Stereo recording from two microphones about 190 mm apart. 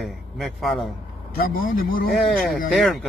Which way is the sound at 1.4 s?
50° left (ahead or behind).